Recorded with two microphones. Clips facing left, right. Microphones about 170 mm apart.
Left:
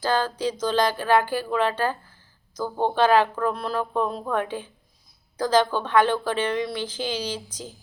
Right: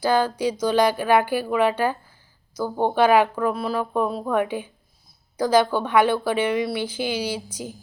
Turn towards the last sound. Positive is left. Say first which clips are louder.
# right 3 dB
turn(degrees=-10)  # may be behind; listen again after turning